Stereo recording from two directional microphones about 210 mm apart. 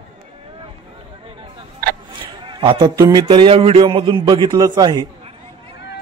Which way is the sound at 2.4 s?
25° right (ahead or behind).